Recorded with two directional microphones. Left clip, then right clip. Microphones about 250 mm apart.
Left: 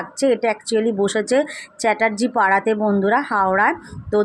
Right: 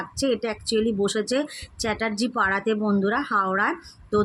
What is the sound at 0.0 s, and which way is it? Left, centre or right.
Speech, centre.